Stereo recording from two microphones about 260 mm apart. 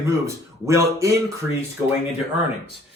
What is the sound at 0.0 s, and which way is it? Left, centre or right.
Speech, centre.